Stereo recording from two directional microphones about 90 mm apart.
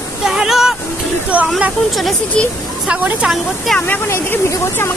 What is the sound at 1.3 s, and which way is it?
Speech, 15° right (ahead or behind).